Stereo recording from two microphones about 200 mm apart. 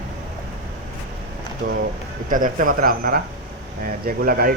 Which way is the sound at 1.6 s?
40° right (ahead or behind).